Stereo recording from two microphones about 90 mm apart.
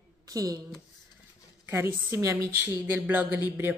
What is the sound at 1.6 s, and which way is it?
A woman's voice, 30° right (ahead or behind).